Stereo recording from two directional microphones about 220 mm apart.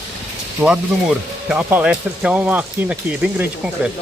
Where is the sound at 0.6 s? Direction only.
5° right (ahead or behind).